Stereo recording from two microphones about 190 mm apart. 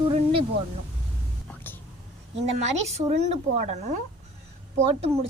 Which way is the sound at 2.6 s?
35° right (ahead or behind).